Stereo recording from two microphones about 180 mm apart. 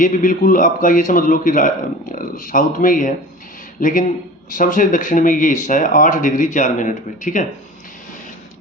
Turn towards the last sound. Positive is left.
turn(degrees=45)  # may be behind; listen again after turning